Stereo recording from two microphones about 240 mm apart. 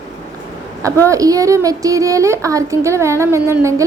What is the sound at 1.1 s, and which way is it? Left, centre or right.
A woman's voice, centre.